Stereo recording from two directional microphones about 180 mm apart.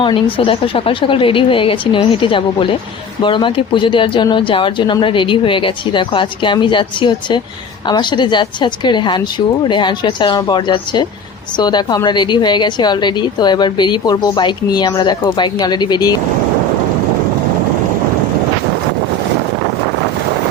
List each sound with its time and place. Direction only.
0.0 s a woman's voice: 30° left (ahead or behind)